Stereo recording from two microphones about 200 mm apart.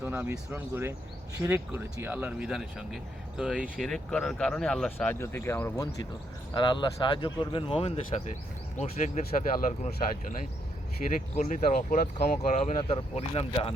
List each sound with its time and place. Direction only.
0.0 s speech: 10° right (ahead or behind); by 13.7 s 30° left (ahead or behind)